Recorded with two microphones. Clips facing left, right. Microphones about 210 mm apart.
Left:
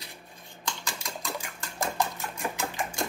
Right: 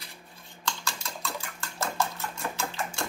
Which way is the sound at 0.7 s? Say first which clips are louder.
Right 1 dB; 15° left (ahead or behind).